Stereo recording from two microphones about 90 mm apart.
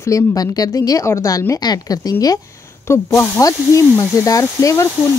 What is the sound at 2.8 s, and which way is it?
Speech, 35° left (ahead or behind).